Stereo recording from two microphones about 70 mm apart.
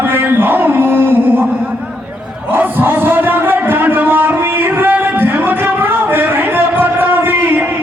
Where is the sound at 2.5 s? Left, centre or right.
Right.